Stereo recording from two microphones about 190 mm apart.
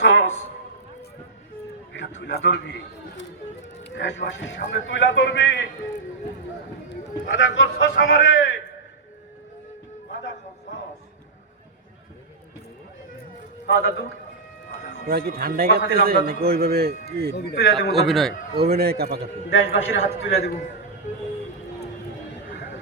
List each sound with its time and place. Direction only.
0.0 s a sound: 70° left (ahead or behind)
2.2 s a man's voice: 65° left (ahead or behind)
3.8 s a man's voice: 70° left (ahead or behind)
7.3 s a man's voice: 80° left
13.7 s a man's voice: 60° left (ahead or behind)
15.0 s a man's voice: 50° right (ahead or behind)
17.3 s a man's voice: 60° left (ahead or behind)
17.9 s a man's voice: centre (ahead or behind)
18.7 s a man's voice: 55° right (ahead or behind)
19.5 s a man's voice: 90° left